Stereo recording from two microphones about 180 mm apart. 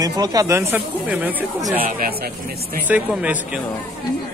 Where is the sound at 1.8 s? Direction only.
55° right (ahead or behind).